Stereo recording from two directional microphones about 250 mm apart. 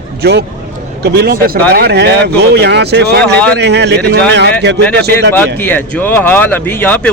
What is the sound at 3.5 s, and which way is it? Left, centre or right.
Speech, right.